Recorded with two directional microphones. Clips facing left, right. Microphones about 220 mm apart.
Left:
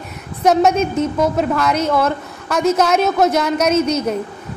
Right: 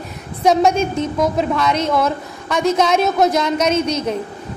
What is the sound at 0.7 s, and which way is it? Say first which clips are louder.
Speech: left 2 dB; 30° right (ahead or behind).